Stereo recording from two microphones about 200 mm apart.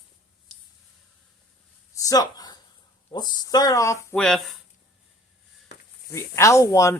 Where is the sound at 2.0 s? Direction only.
20° left (ahead or behind).